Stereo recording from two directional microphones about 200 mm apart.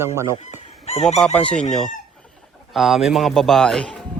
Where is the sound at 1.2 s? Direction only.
5° left (ahead or behind).